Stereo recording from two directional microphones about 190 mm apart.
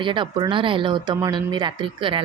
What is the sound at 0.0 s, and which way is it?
Speech, 25° right (ahead or behind).